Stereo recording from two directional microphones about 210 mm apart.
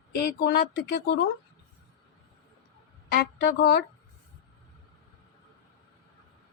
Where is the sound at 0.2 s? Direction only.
50° left (ahead or behind).